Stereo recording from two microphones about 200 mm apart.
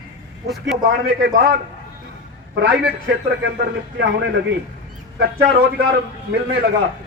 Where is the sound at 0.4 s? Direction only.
Centre (ahead or behind).